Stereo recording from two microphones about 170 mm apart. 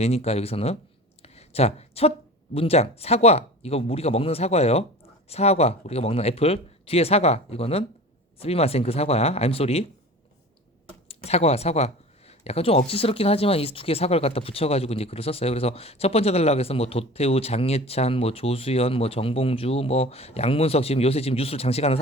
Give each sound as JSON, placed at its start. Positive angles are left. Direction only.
{"t": 0.0, "sound": "speech", "side_deg": 35}
{"t": 1.2, "sound": "a sound", "side_deg": 35}
{"t": 2.6, "sound": "speech", "side_deg": 35}
{"t": 11.1, "sound": "speech", "side_deg": 35}